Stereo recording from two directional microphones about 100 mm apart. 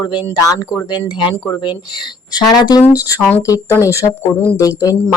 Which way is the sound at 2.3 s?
40° left (ahead or behind).